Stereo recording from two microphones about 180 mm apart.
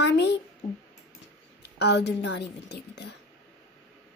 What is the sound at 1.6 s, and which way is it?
Speech, 70° left (ahead or behind).